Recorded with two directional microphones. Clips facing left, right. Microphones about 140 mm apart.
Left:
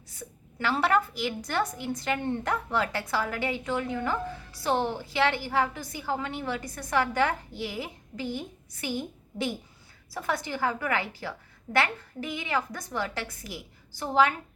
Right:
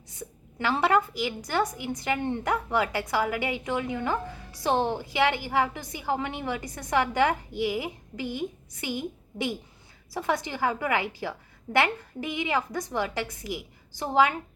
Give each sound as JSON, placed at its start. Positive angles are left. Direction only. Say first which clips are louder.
{"t": 0.1, "sound": "a woman's voice", "louder": "right 3 dB", "side_deg": -15}